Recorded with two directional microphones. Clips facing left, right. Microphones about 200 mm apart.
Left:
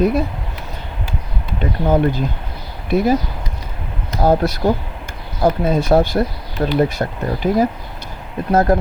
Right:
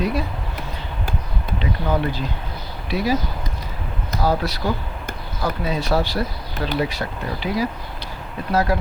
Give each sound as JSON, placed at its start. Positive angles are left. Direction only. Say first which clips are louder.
{"t": 0.0, "sound": "speech", "louder": "left 7 dB", "side_deg": 50}
{"t": 1.5, "sound": "speech", "louder": "left 6 dB", "side_deg": 50}
{"t": 4.2, "sound": "speech", "louder": "left 7 dB", "side_deg": 45}